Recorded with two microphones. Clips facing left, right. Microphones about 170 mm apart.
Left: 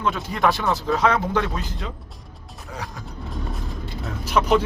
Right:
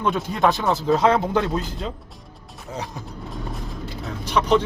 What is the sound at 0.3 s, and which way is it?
Speech, 20° right (ahead or behind).